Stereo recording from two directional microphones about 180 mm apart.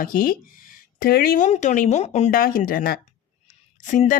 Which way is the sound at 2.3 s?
50° left (ahead or behind).